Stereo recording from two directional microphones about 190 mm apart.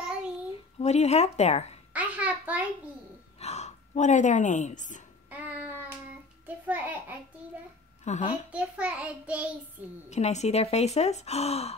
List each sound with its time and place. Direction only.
0.7 s speech: 35° left (ahead or behind)
2.0 s a sound: 5° right (ahead or behind)
3.3 s speech: 35° left (ahead or behind)
5.3 s child singing: 10° right (ahead or behind)
6.4 s a child's voice: 10° right (ahead or behind)
8.0 s a woman's voice: 40° left (ahead or behind)
8.5 s a child's voice: 5° right (ahead or behind)
10.0 s speech: 35° left (ahead or behind)